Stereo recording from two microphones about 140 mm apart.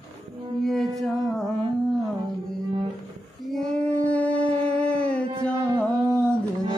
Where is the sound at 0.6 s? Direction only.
Centre (ahead or behind).